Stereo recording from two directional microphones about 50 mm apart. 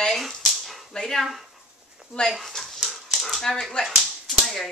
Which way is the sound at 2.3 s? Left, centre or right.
Centre.